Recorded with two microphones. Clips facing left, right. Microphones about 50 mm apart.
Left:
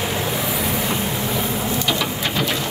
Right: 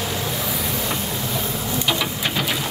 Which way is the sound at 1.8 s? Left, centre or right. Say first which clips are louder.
Left 1 dB; centre.